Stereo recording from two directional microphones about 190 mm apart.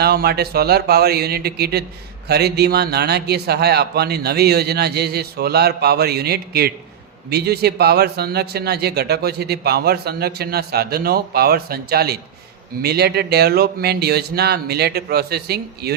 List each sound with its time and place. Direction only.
0.0 s a man's voice: 55° right (ahead or behind)